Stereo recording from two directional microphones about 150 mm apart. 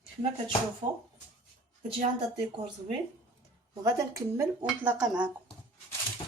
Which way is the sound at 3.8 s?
20° right (ahead or behind).